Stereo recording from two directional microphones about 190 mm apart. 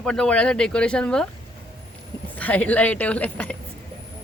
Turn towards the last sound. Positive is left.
turn(degrees=5)  # may be behind; listen again after turning